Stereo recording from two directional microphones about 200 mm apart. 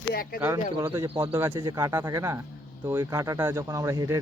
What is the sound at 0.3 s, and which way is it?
Speech, 10° right (ahead or behind).